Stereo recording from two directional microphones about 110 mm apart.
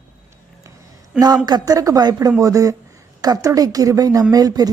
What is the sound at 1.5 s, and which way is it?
A woman's voice, 35° right (ahead or behind).